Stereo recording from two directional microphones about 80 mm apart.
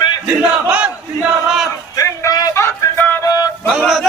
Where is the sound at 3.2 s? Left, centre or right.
Left.